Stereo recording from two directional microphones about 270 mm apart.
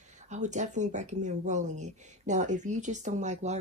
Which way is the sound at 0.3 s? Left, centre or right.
Right.